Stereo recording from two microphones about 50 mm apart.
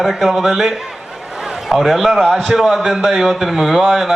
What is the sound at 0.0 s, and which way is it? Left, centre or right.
A man's voice, centre.